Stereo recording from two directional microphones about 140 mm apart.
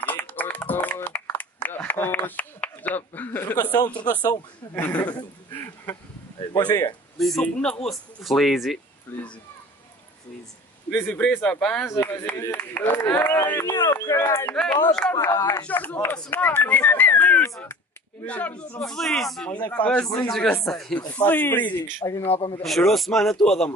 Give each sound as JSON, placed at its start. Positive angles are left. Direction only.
{"t": 0.0, "sound": "a sound", "side_deg": 10}
{"t": 3.8, "sound": "a man's voice", "side_deg": 30}
{"t": 4.7, "sound": "a man's voice", "side_deg": 10}
{"t": 7.2, "sound": "speech", "side_deg": 0}
{"t": 9.1, "sound": "a sound", "side_deg": 10}
{"t": 10.9, "sound": "speech", "side_deg": 10}
{"t": 11.9, "sound": "speech", "side_deg": 20}
{"t": 14.5, "sound": "speech", "side_deg": 10}
{"t": 21.1, "sound": "speech", "side_deg": 10}
{"t": 22.2, "sound": "a man's voice", "side_deg": 40}
{"t": 22.6, "sound": "speech", "side_deg": 0}